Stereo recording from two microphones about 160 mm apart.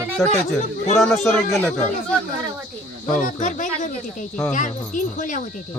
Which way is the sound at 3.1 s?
55° left (ahead or behind).